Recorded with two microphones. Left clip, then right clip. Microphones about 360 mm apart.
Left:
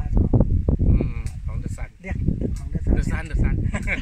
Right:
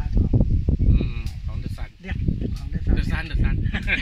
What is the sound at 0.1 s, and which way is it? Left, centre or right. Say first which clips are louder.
Sheep: left 3 dB; left.